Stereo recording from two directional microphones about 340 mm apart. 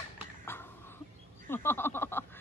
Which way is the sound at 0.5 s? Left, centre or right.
Centre.